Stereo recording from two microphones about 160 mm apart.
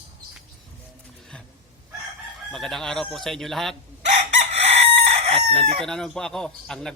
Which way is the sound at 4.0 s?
45° right (ahead or behind).